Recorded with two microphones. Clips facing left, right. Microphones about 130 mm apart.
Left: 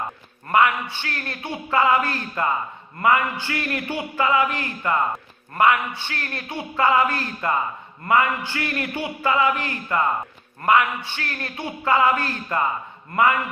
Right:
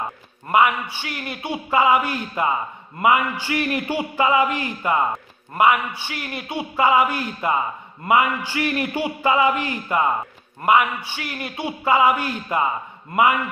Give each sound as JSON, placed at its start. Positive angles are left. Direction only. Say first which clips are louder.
{"t": 0.5, "sound": "a man's voice", "louder": "right 1 dB", "side_deg": -15}